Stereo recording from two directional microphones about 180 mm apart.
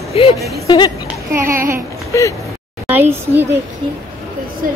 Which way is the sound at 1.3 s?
15° right (ahead or behind).